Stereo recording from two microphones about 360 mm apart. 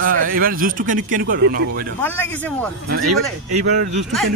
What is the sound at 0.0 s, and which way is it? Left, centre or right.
A man's voice, right.